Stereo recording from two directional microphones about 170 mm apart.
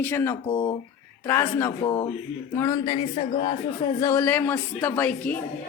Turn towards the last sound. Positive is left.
turn(degrees=10)  # may be behind; listen again after turning